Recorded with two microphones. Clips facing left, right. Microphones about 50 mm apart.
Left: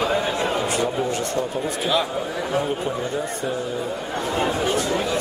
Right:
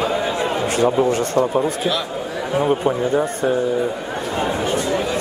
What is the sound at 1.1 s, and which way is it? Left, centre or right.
Speech, right.